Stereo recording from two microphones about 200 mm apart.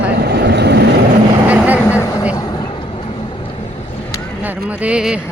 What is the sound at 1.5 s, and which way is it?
Vehicle, 5° right (ahead or behind).